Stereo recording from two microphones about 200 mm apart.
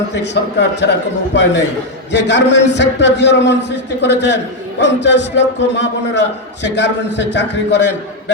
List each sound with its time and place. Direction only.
0.1 s a man's voice: 60° left (ahead or behind)